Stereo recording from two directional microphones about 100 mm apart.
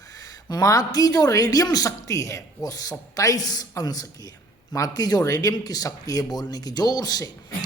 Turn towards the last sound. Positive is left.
turn(degrees=40)  # may be behind; listen again after turning